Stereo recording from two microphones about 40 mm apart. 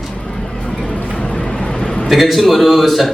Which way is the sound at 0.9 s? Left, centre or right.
Left.